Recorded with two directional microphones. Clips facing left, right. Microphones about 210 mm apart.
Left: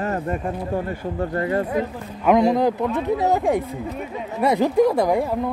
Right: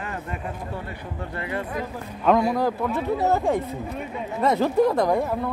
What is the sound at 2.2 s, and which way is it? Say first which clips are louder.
A man's voice: left 4 dB; 20° left (ahead or behind).